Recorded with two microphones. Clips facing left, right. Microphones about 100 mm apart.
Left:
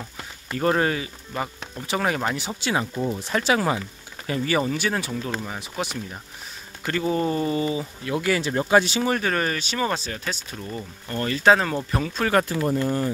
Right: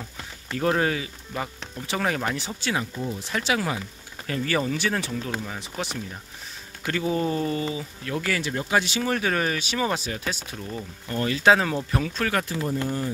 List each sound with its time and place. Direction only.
0.5 s speech: centre (ahead or behind)
2.8 s speech: 45° left (ahead or behind)
4.3 s speech: 10° left (ahead or behind)
7.5 s speech: 25° left (ahead or behind)
8.4 s speech: 35° left (ahead or behind)
9.2 s speech: 5° right (ahead or behind)
12.3 s speech: 40° left (ahead or behind)